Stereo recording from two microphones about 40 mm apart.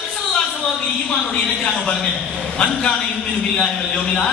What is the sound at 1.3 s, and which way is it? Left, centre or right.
Speech, left.